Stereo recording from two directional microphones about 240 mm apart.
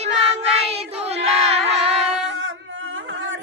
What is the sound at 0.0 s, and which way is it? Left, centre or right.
Child singing, right.